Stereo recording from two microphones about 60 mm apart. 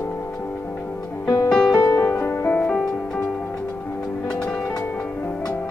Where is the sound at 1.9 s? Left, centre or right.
Left.